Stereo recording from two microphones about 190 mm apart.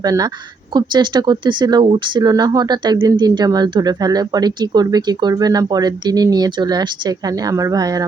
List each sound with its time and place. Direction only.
0.0 s speech: 20° right (ahead or behind)